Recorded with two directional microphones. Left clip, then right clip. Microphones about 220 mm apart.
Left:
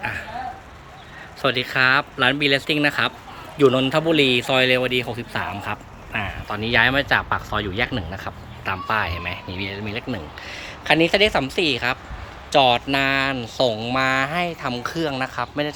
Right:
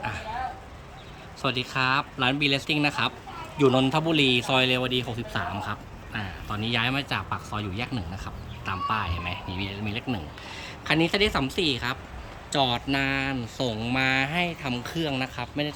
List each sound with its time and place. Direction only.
1.4 s speech: centre (ahead or behind)